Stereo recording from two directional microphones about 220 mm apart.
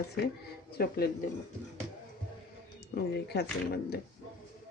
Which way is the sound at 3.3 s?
45° left (ahead or behind).